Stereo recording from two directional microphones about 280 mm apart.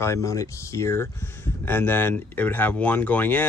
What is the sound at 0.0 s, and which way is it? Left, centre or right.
Speech, centre.